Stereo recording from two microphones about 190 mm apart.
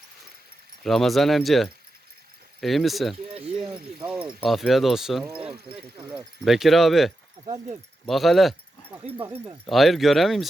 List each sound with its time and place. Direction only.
0.8 s speech: centre (ahead or behind)
3.3 s speech: 30° right (ahead or behind)
3.7 s speech: 5° right (ahead or behind)
7.4 s speech: 30° right (ahead or behind)
8.0 s speech: centre (ahead or behind)
9.1 s speech: 10° right (ahead or behind)
9.6 s speech: centre (ahead or behind)